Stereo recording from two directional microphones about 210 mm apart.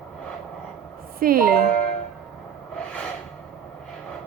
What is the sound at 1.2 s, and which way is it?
Speech, 45° right (ahead or behind).